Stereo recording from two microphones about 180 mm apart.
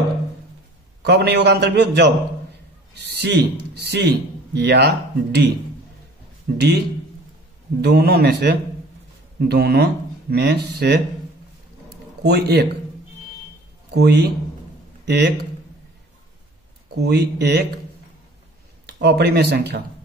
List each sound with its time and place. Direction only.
1.0 s a man's voice: 70° right (ahead or behind)
6.5 s a man's voice: 50° right (ahead or behind)
7.8 s a man's voice: 60° right (ahead or behind)
12.2 s a man's voice: 65° right (ahead or behind)
13.9 s a man's voice: 70° right (ahead or behind)
16.9 s a man's voice: 65° right (ahead or behind)
18.9 s a man's voice: 70° right (ahead or behind)